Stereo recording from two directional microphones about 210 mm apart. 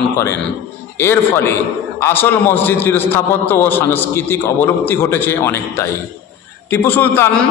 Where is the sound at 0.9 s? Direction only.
10° left (ahead or behind).